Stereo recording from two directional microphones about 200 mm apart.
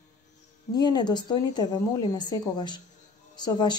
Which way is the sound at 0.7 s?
20° left (ahead or behind).